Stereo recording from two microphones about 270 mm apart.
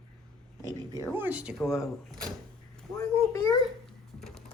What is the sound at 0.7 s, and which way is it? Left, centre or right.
Speech, centre.